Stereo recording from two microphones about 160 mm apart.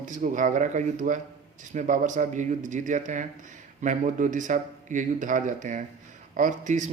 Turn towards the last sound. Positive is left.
turn(degrees=-50)  # may be behind; listen again after turning